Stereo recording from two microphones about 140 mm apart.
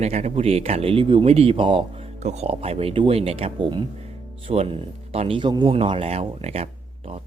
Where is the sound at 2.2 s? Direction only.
50° right (ahead or behind).